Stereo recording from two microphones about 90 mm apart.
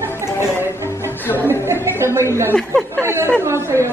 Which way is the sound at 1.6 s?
30° right (ahead or behind).